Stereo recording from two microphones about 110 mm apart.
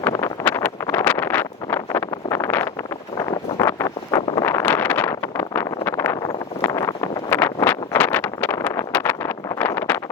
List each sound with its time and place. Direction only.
0.4 s wind noise: 20° left (ahead or behind)
4.4 s vehicle: 15° left (ahead or behind)